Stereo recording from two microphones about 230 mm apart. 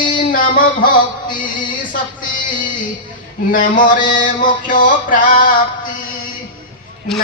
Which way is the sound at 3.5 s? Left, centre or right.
Left.